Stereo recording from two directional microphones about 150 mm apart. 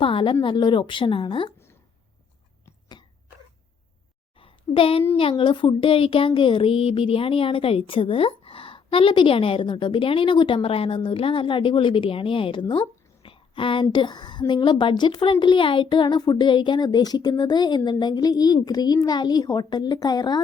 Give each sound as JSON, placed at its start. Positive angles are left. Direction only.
{"t": 0.0, "sound": "speech", "side_deg": 35}
{"t": 4.4, "sound": "a sound", "side_deg": 35}
{"t": 5.1, "sound": "a woman's voice", "side_deg": 35}